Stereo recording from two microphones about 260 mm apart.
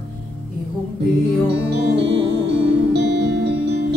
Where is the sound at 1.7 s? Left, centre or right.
Right.